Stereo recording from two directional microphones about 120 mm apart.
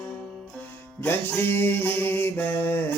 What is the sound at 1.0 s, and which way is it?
Mantra, 20° left (ahead or behind).